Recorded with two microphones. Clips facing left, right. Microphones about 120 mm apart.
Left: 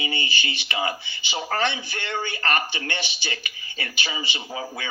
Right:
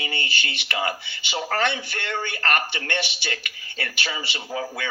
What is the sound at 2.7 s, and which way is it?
Speech, 60° right (ahead or behind).